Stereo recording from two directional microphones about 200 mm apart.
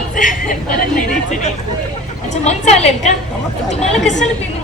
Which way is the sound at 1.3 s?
35° left (ahead or behind).